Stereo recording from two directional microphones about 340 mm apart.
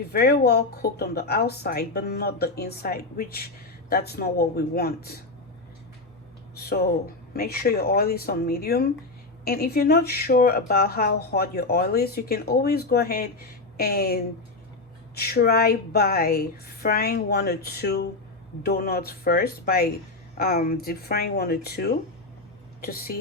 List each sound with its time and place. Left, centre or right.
0.1 s speech: left
6.6 s speech: left